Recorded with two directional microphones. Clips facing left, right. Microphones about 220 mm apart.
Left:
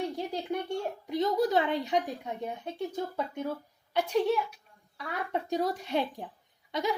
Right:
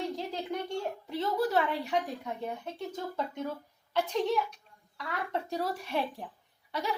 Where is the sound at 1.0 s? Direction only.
15° left (ahead or behind).